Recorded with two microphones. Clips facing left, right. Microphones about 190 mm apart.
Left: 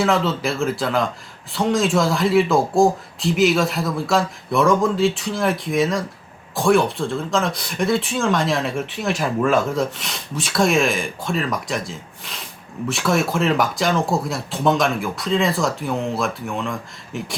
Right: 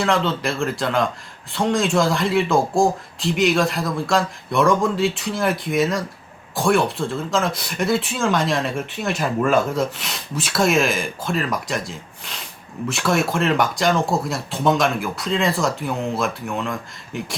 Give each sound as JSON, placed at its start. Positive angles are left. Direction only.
{"t": 0.0, "sound": "speech", "side_deg": 5}